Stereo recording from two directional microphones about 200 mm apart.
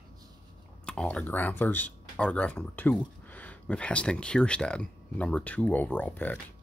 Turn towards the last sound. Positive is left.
turn(degrees=10)  # may be behind; listen again after turning